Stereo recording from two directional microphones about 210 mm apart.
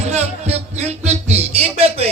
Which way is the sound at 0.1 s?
30° right (ahead or behind).